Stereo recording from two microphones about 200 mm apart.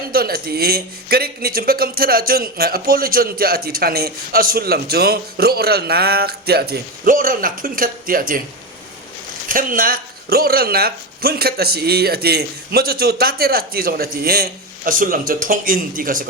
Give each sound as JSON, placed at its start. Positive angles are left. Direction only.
{"t": 0.1, "sound": "speech", "side_deg": -50}
{"t": 9.5, "sound": "speech", "side_deg": -45}